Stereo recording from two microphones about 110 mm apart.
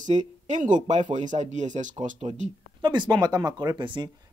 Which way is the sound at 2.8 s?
45° right (ahead or behind).